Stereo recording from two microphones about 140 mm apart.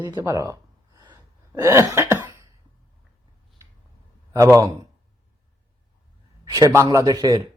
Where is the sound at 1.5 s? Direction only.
20° right (ahead or behind).